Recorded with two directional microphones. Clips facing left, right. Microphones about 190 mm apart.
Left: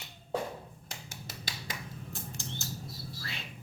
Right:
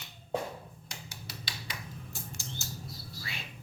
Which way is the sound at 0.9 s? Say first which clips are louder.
Left 1 dB; 50° left (ahead or behind).